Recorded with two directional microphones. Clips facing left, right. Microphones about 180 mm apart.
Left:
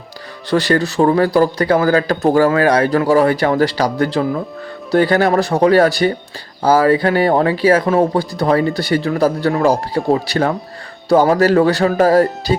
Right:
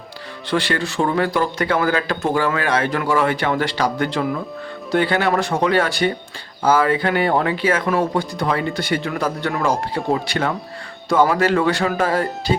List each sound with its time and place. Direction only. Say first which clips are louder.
0.5 s speech: left 6 dB; 40° left (ahead or behind)